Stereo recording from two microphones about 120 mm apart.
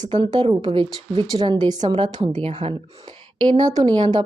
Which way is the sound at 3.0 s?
35° right (ahead or behind).